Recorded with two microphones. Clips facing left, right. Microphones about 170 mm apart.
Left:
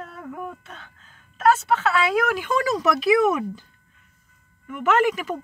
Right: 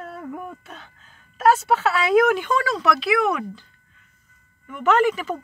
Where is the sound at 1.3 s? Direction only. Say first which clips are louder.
Right 1 dB; 5° right (ahead or behind).